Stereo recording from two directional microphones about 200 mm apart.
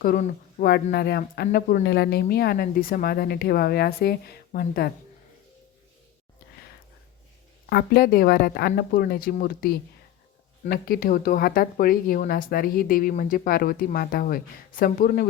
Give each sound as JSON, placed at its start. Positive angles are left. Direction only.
{"t": 0.0, "sound": "speech", "side_deg": 45}
{"t": 7.7, "sound": "speech", "side_deg": 50}